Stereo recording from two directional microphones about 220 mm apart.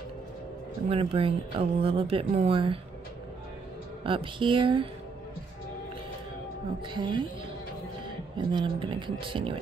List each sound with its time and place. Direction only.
0.8 s speech: 25° right (ahead or behind)
4.0 s speech: 25° right (ahead or behind)
6.9 s speech: 20° right (ahead or behind)
8.5 s speech: 20° right (ahead or behind)